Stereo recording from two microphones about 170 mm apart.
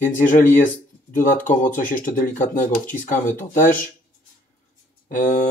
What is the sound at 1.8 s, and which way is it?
Speech, 55° left (ahead or behind).